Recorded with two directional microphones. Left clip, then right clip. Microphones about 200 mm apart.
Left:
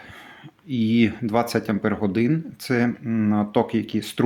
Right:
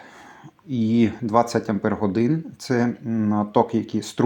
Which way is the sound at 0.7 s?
5° left (ahead or behind).